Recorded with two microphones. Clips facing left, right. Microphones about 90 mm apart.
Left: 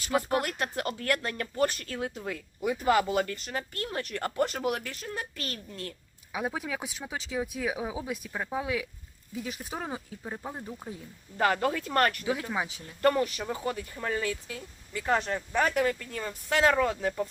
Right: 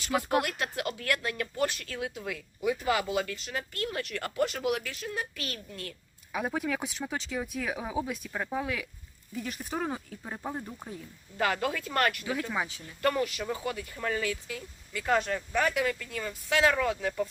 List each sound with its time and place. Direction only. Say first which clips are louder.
0.1 s speech: left 2 dB; 10° left (ahead or behind)
0.4 s speech: left 1 dB; 35° left (ahead or behind)
6.3 s speech: right 2 dB; 5° left (ahead or behind)
11.3 s speech: left 3 dB; 35° left (ahead or behind)
12.2 s speech: left 1 dB; 20° left (ahead or behind)
13.0 s speech: left 3 dB; 35° left (ahead or behind)